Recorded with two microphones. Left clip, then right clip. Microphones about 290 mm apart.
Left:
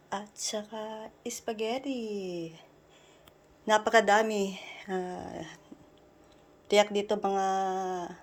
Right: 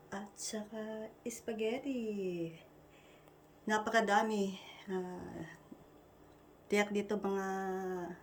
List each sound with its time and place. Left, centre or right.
0.1 s a woman's voice: centre
3.7 s a woman's voice: centre
6.7 s speech: centre